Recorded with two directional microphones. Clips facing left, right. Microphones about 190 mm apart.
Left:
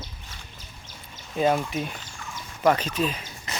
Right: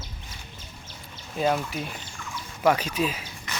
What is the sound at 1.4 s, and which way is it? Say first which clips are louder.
Speech: left 2 dB; centre (ahead or behind).